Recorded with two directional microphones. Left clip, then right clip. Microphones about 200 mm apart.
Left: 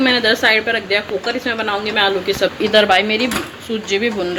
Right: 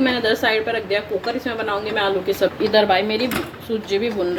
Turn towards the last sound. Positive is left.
turn(degrees=0)  # may be behind; listen again after turning